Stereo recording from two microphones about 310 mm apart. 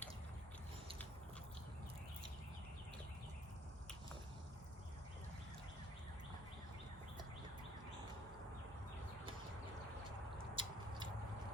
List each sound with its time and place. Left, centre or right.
10.5 s mouse: centre